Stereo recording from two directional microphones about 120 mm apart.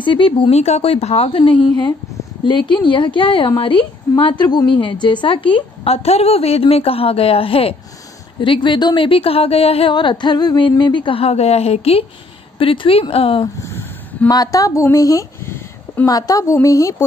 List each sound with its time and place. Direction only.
0.0 s a woman's voice: 45° left (ahead or behind)
8.4 s a woman's voice: 40° left (ahead or behind)
9.9 s a woman's voice: 40° left (ahead or behind)
13.7 s a sound: 20° left (ahead or behind)
14.3 s speech: 30° left (ahead or behind)
16.1 s a woman's voice: 30° left (ahead or behind)